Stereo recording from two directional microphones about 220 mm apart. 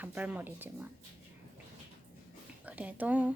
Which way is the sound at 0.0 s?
5° right (ahead or behind).